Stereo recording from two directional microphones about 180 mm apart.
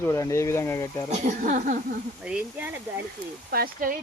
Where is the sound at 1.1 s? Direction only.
40° right (ahead or behind).